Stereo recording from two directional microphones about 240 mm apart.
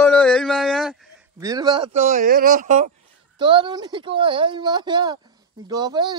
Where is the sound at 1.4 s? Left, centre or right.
Centre; by 2.9 s right.